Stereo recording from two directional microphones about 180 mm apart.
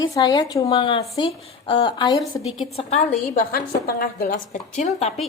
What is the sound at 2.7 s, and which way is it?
Speech, 35° left (ahead or behind).